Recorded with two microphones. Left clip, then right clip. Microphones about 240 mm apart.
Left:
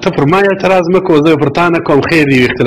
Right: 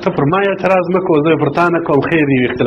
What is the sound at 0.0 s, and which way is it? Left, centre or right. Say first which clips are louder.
A man's voice: left 4 dB; left.